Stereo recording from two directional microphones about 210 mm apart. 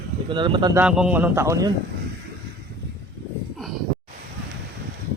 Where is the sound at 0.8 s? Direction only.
5° right (ahead or behind).